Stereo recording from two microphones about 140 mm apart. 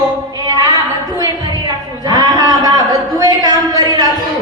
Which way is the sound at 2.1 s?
30° right (ahead or behind).